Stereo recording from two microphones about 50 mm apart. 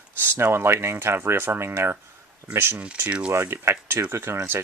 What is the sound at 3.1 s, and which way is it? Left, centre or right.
Speech, right.